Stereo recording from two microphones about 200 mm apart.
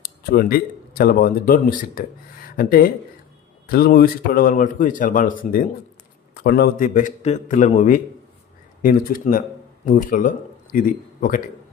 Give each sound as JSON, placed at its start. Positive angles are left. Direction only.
{"t": 0.0, "sound": "a man's voice", "side_deg": 50}